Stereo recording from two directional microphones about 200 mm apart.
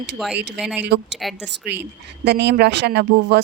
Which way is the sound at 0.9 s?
55° right (ahead or behind).